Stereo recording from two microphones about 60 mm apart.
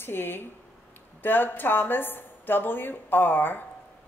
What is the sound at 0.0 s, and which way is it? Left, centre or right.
A woman's voice, left.